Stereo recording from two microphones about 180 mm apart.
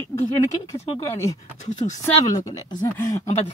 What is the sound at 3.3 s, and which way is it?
Speech, 35° left (ahead or behind).